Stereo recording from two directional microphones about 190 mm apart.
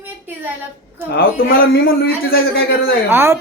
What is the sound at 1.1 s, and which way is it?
A man's voice, 50° left (ahead or behind).